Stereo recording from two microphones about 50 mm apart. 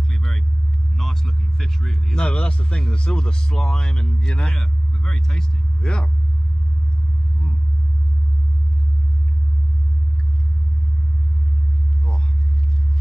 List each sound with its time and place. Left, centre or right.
0.1 s vehicle: centre
0.9 s speech: centre